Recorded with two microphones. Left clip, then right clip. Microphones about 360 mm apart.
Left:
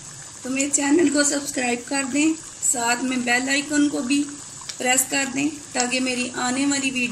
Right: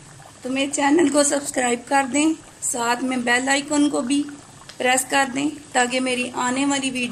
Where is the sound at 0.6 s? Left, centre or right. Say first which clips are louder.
Right 2 dB; right.